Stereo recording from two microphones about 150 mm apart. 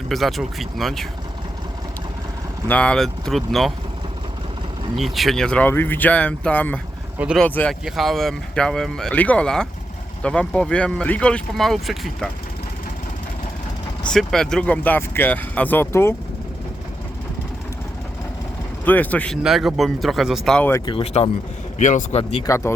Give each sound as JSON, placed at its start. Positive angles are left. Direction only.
{"t": 0.1, "sound": "speech", "side_deg": 0}
{"t": 2.6, "sound": "speech", "side_deg": 10}
{"t": 4.9, "sound": "speech", "side_deg": 0}
{"t": 14.1, "sound": "speech", "side_deg": 5}
{"t": 18.9, "sound": "speech", "side_deg": 10}
{"t": 19.4, "sound": "speech", "side_deg": 0}
{"t": 21.0, "sound": "speech", "side_deg": 45}
{"t": 21.8, "sound": "speech", "side_deg": 55}
{"t": 22.2, "sound": "speech", "side_deg": 40}
{"t": 22.4, "sound": "speech", "side_deg": 20}